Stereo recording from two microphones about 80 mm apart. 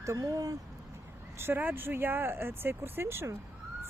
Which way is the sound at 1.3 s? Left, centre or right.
Right.